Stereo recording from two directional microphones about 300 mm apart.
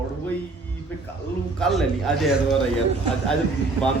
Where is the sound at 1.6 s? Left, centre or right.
Centre.